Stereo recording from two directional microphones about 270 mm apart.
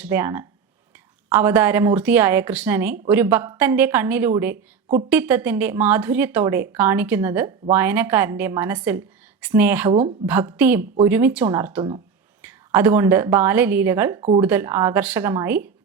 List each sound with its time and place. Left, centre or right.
0.0 s speech: centre
9.9 s speech: centre
10.2 s speech: centre
14.2 s speech: right
14.4 s speech: centre